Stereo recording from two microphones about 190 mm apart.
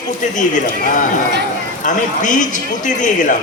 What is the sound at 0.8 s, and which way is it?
A man's voice, 45° left (ahead or behind).